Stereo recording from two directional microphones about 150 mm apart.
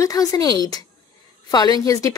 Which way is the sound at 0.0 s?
25° left (ahead or behind).